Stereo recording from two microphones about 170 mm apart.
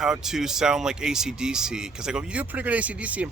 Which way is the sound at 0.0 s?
5° right (ahead or behind).